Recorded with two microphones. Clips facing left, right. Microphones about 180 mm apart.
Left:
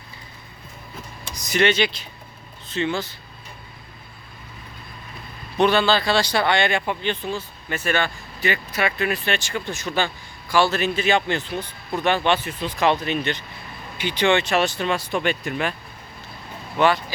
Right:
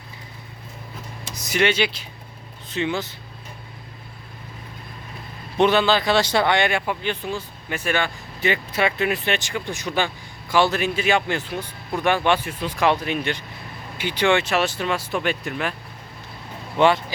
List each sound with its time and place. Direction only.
1.4 s speech: 10° right (ahead or behind)
5.5 s speech: 20° right (ahead or behind); by 15.7 s centre (ahead or behind)
16.7 s speech: 25° right (ahead or behind)